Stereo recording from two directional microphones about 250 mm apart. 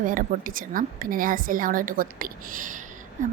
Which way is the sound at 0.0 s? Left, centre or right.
Right.